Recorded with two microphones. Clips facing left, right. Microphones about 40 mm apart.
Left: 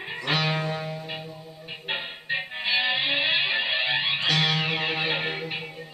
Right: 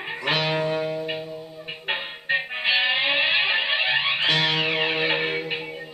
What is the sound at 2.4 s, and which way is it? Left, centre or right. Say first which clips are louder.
Music: right 1 dB; right.